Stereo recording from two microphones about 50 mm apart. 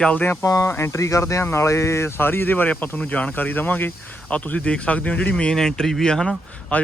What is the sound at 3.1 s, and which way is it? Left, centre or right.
Speech, left.